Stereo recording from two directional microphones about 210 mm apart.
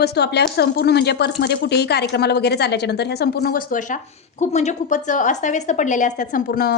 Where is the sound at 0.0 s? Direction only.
50° left (ahead or behind).